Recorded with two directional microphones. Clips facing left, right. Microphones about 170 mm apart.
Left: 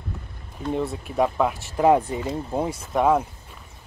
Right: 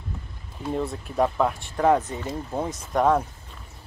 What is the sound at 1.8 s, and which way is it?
Speech, 15° left (ahead or behind).